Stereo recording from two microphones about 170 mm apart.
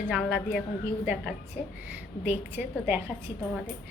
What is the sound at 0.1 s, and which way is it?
Speech, centre (ahead or behind).